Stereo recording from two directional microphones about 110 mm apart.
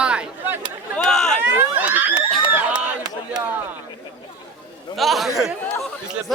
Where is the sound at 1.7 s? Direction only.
15° right (ahead or behind).